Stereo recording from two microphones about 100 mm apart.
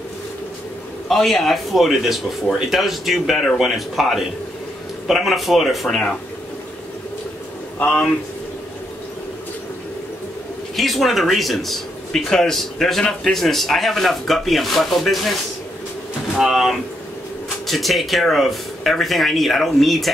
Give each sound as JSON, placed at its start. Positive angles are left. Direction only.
{"t": 1.0, "sound": "speech", "side_deg": 0}
{"t": 7.8, "sound": "speech", "side_deg": 15}
{"t": 10.8, "sound": "speech", "side_deg": 0}
{"t": 16.3, "sound": "speech", "side_deg": 0}